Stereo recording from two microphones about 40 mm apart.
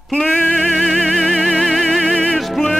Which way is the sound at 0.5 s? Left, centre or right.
Centre.